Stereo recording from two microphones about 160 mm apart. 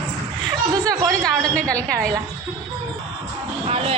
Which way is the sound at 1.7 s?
10° left (ahead or behind).